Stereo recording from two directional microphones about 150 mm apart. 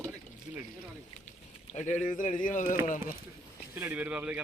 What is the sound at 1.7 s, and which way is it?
Speech, 55° left (ahead or behind).